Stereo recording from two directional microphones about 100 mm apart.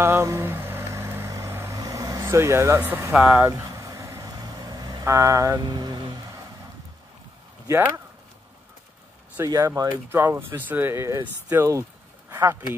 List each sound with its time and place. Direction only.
0.0 s vehicle: 30° right (ahead or behind)
2.9 s speech: 20° right (ahead or behind)
3.3 s vehicle: 30° right (ahead or behind); by 6.1 s 45° right (ahead or behind)
7.6 s speech: 25° right (ahead or behind)
9.4 s vehicle: 30° right (ahead or behind)
9.8 s speech: 20° right (ahead or behind)